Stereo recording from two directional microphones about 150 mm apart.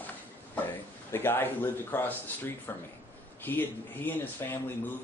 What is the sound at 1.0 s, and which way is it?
Speech, 15° left (ahead or behind).